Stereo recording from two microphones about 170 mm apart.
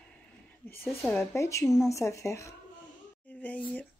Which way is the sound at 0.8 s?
Centre (ahead or behind).